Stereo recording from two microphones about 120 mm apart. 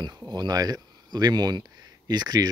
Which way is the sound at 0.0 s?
35° right (ahead or behind).